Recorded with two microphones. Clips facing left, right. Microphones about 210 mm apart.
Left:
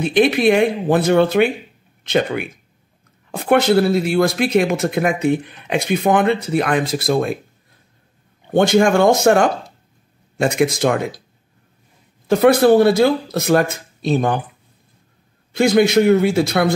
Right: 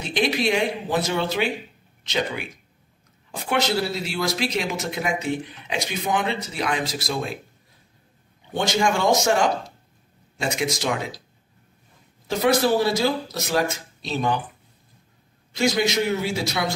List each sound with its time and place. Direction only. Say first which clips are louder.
0.0 s speech: left 9 dB; 55° left (ahead or behind)
8.5 s speech: left 9 dB; 55° left (ahead or behind)
12.3 s speech: left 8 dB; 55° left (ahead or behind)
15.5 s speech: left 9 dB; 55° left (ahead or behind)